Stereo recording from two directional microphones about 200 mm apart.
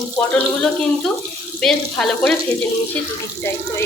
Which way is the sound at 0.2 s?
5° left (ahead or behind).